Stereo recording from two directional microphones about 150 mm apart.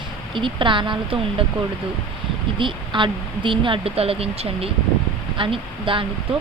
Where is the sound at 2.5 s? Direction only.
35° right (ahead or behind).